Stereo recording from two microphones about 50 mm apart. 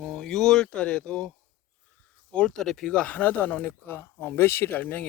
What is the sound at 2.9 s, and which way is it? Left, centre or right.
Speech, left.